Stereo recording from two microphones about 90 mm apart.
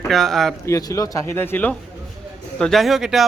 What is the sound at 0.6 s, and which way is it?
Speech, 35° left (ahead or behind).